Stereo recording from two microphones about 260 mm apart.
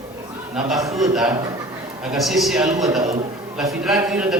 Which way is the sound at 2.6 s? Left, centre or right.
Centre.